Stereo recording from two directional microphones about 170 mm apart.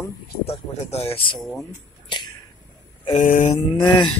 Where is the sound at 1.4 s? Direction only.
Centre (ahead or behind).